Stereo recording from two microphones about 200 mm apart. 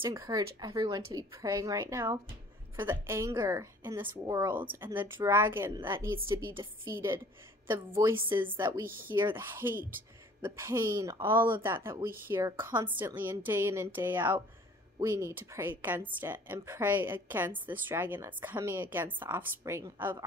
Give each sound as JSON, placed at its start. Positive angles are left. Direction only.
{"t": 0.0, "sound": "a woman's voice", "side_deg": -15}
{"t": 9.0, "sound": "a woman's voice", "side_deg": -10}